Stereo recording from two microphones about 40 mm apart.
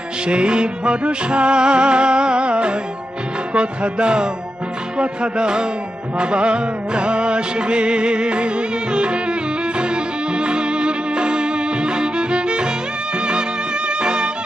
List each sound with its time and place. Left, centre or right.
0.3 s music: right